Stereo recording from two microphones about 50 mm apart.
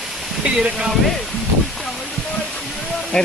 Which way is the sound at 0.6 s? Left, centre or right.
Centre.